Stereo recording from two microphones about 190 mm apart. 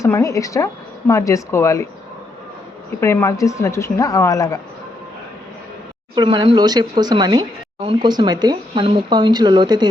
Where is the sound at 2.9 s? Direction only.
15° left (ahead or behind).